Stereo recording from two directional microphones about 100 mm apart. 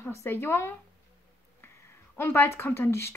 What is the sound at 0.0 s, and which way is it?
Speech, 25° left (ahead or behind).